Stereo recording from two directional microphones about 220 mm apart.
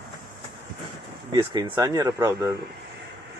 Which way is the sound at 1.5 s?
15° right (ahead or behind).